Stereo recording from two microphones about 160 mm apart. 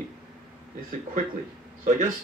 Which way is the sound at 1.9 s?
55° right (ahead or behind).